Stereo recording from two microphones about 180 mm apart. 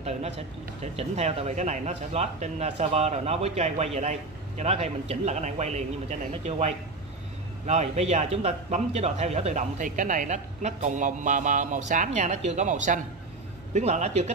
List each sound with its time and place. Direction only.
0.9 s speech: 35° right (ahead or behind)